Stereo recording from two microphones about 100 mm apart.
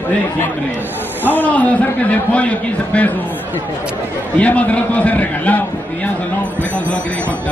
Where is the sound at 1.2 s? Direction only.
15° left (ahead or behind).